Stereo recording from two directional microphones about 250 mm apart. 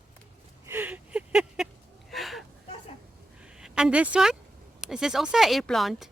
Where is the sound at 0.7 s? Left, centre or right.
Centre.